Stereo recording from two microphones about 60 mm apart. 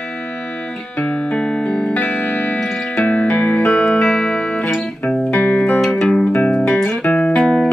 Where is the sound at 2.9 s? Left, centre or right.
Left.